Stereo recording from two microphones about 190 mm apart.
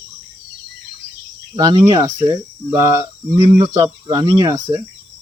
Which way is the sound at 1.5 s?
25° right (ahead or behind).